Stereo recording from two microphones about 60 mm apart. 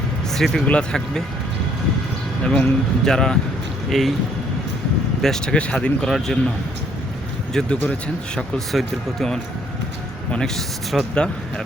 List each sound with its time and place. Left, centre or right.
0.3 s speech: centre
0.6 s speech: centre
2.4 s a man's voice: centre
5.2 s a man's voice: centre
5.5 s speech: centre
6.1 s speech: centre
7.6 s a man's voice: centre
11.1 s a man's voice: centre